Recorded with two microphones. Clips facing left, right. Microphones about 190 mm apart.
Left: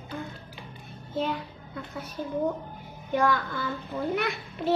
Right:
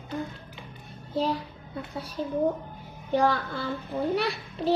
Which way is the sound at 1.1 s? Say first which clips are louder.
Right 2 dB; 35° right (ahead or behind).